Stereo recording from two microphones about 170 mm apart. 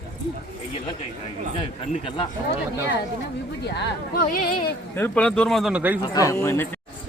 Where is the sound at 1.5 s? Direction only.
30° left (ahead or behind).